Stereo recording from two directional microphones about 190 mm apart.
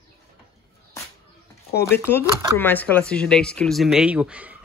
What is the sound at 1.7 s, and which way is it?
Speech, 10° left (ahead or behind).